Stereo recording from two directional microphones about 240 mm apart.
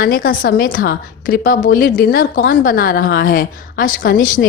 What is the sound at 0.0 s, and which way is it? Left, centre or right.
A woman's voice, left.